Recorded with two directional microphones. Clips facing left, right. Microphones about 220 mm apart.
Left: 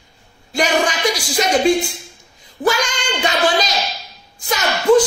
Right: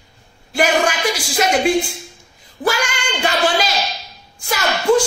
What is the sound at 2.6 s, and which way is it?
Female singing, 10° right (ahead or behind).